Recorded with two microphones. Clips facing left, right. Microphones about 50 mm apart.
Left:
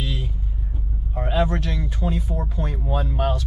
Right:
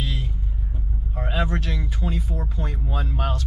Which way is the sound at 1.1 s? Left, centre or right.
Centre.